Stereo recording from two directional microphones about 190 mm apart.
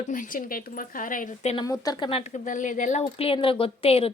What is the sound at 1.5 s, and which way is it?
Speech, 20° left (ahead or behind).